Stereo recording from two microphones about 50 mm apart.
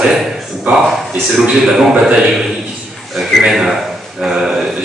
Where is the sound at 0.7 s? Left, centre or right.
Right.